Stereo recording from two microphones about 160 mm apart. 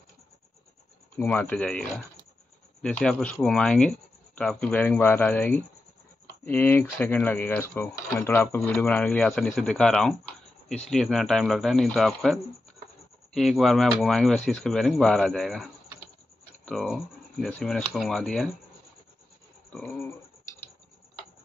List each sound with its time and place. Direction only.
1.1 s speech: 10° left (ahead or behind)
19.7 s speech: 10° left (ahead or behind)